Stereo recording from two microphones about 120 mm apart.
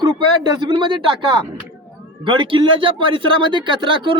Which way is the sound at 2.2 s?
45° right (ahead or behind).